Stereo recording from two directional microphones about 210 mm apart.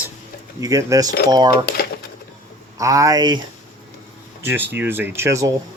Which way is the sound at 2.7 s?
15° right (ahead or behind).